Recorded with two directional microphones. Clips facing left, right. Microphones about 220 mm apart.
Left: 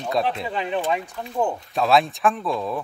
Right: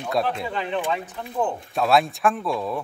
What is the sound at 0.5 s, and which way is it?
Speech, 15° left (ahead or behind).